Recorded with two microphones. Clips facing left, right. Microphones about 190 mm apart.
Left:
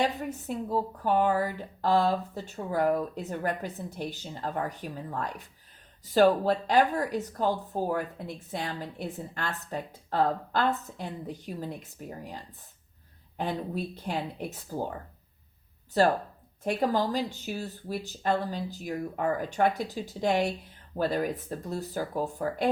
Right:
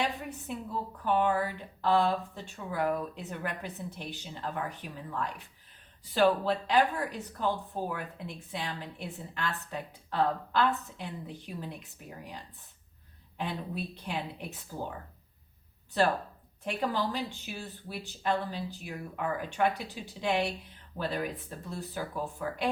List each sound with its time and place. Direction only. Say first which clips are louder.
0.0 s a woman's voice: left 5 dB; 40° left (ahead or behind)
13.3 s speech: left 4 dB; 45° left (ahead or behind)
16.0 s a woman's voice: left 4 dB; 40° left (ahead or behind)